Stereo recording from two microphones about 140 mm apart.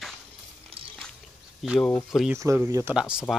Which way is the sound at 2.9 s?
5° right (ahead or behind).